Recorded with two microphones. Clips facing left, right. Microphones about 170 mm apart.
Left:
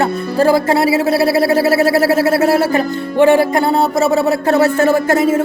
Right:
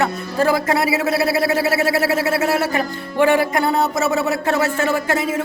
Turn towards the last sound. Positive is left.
turn(degrees=40)  # may be behind; listen again after turning